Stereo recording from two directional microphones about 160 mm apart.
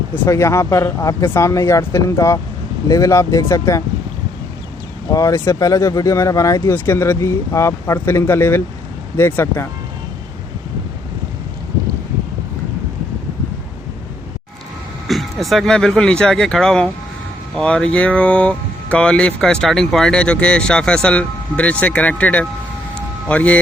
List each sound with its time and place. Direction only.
0.3 s speech: 20° left (ahead or behind)
5.1 s speech: 20° left (ahead or behind)
15.0 s speech: centre (ahead or behind)